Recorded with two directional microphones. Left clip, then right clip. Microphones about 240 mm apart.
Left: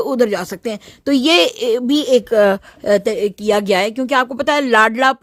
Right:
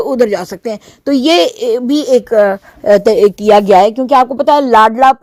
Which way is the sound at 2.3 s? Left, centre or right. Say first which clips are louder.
Right 3 dB; left.